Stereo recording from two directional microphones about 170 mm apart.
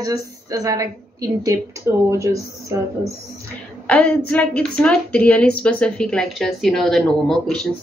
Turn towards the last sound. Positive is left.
turn(degrees=0)  # may be behind; listen again after turning